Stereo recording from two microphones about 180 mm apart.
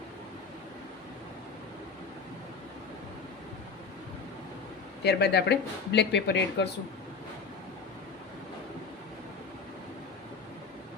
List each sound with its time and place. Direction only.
5.0 s speech: 65° left (ahead or behind)